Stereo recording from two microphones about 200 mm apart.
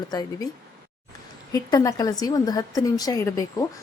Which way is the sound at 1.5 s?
20° left (ahead or behind).